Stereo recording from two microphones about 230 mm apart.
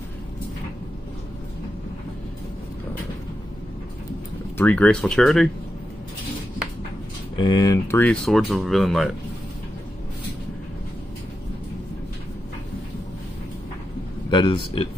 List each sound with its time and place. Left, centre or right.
4.6 s speech: centre
7.3 s speech: centre
14.3 s speech: left